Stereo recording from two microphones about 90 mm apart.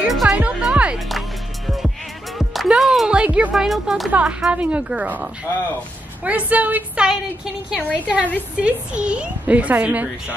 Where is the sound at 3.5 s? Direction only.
Centre (ahead or behind).